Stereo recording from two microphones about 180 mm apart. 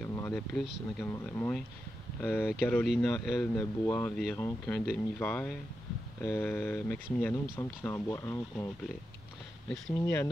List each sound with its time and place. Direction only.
0.0 s a sound: 15° left (ahead or behind)
0.3 s speech: 5° left (ahead or behind)
9.7 s speech: 15° left (ahead or behind)